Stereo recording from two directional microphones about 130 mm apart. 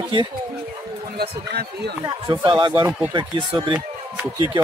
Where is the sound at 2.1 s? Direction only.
35° right (ahead or behind).